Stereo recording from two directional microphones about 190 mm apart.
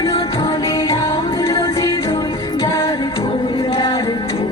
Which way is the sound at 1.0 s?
30° left (ahead or behind).